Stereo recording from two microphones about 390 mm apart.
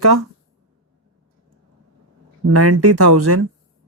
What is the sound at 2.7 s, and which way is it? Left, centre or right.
Speech, right.